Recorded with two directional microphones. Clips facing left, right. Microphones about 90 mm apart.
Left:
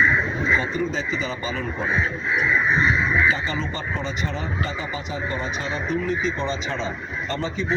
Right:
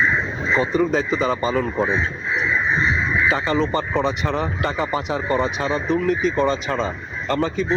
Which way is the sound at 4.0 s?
65° right (ahead or behind).